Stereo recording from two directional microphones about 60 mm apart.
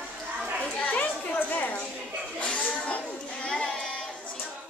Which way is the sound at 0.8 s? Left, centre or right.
Left.